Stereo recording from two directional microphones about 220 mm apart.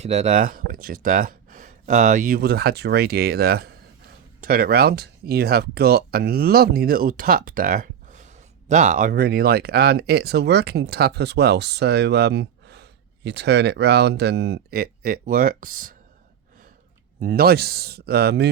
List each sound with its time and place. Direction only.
0.0 s speech: 30° right (ahead or behind)
17.2 s speech: 40° right (ahead or behind)